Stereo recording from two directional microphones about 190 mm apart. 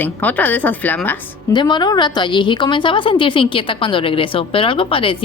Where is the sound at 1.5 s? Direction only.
25° left (ahead or behind).